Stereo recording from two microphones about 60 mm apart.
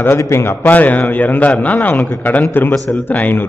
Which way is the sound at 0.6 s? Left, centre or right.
Left.